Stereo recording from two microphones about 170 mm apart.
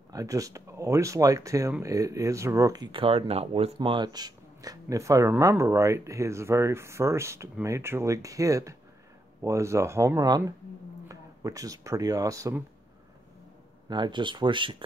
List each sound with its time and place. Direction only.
0.1 s speech: 20° right (ahead or behind)
13.8 s speech: 25° right (ahead or behind)